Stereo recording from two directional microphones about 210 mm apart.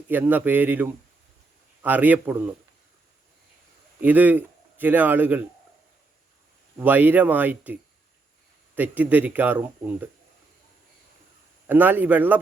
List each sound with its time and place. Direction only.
0.1 s a man's voice: 10° right (ahead or behind)
4.0 s a man's voice: 10° right (ahead or behind)
6.7 s a man's voice: 10° right (ahead or behind)
11.6 s a man's voice: 10° right (ahead or behind)